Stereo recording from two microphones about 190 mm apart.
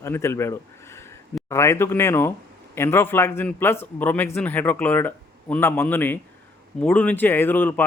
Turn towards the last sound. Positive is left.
turn(degrees=10)  # may be behind; listen again after turning